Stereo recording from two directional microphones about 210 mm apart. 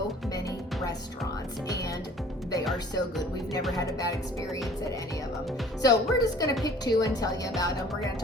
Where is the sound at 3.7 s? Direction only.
15° left (ahead or behind).